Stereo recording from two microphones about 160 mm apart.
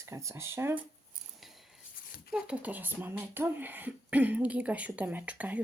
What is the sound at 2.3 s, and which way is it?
Speech, 5° right (ahead or behind).